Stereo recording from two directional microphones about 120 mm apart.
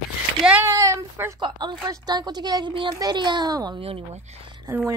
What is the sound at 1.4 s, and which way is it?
A woman's voice, 40° right (ahead or behind).